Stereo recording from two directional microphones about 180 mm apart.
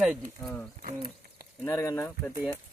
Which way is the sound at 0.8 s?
45° right (ahead or behind).